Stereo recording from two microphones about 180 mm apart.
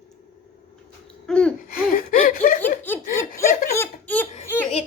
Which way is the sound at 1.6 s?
55° left (ahead or behind).